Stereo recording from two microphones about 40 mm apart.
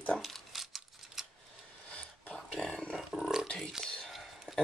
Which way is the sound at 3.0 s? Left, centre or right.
Centre.